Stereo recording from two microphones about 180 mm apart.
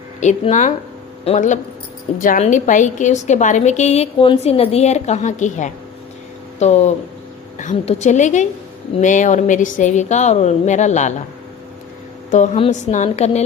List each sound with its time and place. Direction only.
0.2 s a woman's voice: 40° left (ahead or behind)
2.1 s a woman's voice: 50° left (ahead or behind)
12.3 s a woman's voice: 35° left (ahead or behind)